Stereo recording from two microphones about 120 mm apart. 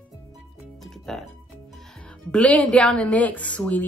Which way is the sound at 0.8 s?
Centre (ahead or behind).